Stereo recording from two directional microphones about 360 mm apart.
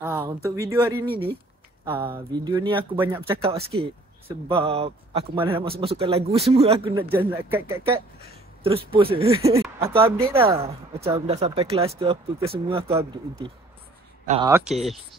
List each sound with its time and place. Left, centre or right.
0.0 s speech: centre
1.0 s speech: centre
2.3 s speech: centre
14.2 s speech: centre
14.5 s speech: centre